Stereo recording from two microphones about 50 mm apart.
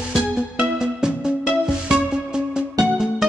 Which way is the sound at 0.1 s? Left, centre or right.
Centre.